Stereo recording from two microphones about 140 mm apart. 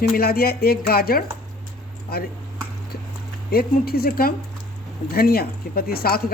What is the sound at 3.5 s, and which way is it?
Speech, 90° left.